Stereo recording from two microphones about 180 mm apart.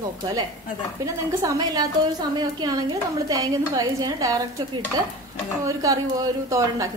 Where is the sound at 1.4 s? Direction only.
20° right (ahead or behind).